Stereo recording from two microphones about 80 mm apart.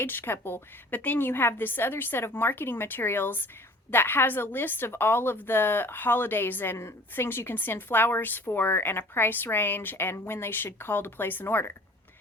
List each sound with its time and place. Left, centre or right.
0.0 s a woman's voice: left